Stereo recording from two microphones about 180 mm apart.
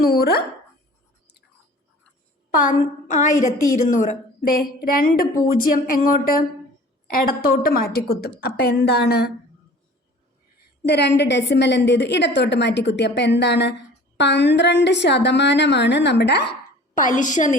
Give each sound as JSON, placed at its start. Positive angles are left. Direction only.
{"t": 0.0, "sound": "a woman's voice", "side_deg": 60}
{"t": 2.5, "sound": "a woman's voice", "side_deg": 50}
{"t": 4.4, "sound": "a woman's voice", "side_deg": 55}
{"t": 10.8, "sound": "a woman's voice", "side_deg": 70}
{"t": 16.9, "sound": "a woman's voice", "side_deg": 45}